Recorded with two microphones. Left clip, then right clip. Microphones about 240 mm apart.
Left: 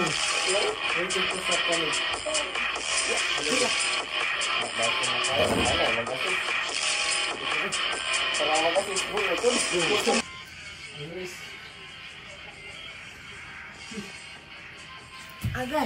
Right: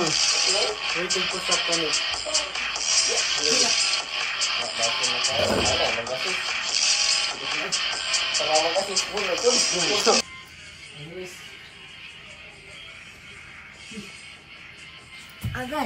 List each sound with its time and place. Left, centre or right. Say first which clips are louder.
0.0 s music: right 4 dB; left